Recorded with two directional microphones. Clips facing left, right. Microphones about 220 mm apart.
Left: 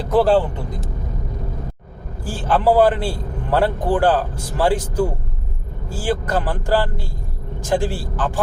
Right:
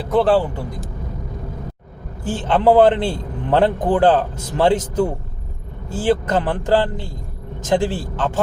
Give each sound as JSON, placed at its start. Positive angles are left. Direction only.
{"t": 0.1, "sound": "speech", "side_deg": 0}
{"t": 2.2, "sound": "a man's voice", "side_deg": -20}